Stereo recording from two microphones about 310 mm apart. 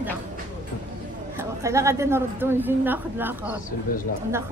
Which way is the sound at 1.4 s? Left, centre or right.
Centre.